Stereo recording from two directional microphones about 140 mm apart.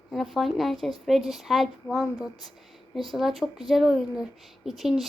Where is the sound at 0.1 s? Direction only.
Centre (ahead or behind).